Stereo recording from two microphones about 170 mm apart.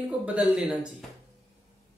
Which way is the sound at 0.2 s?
5° right (ahead or behind).